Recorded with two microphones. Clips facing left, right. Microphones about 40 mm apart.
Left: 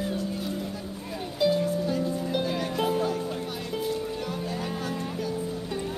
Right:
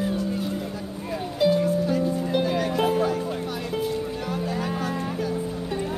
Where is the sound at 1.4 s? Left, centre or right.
Centre.